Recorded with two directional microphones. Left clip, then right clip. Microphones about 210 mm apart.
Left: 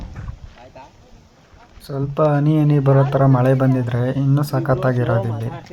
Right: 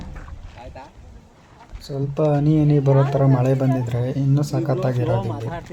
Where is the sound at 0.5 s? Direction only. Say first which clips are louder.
Right 2 dB; 50° right (ahead or behind).